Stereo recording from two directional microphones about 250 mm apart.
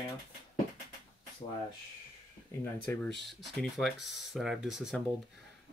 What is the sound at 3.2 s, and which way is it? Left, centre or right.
Speech, centre.